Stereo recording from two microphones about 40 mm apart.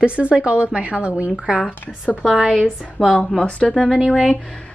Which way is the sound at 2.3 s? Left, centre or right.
Centre.